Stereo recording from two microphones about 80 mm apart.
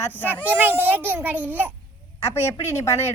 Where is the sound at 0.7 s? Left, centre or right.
Right.